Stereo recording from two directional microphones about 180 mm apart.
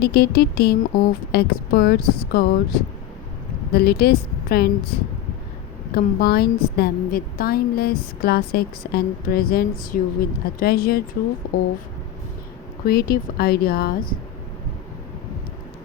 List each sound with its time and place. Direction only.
0.0 s a woman's voice: 60° left (ahead or behind)
3.7 s a woman's voice: 60° left (ahead or behind)
5.9 s a woman's voice: 55° left (ahead or behind)
12.8 s a woman's voice: 55° left (ahead or behind)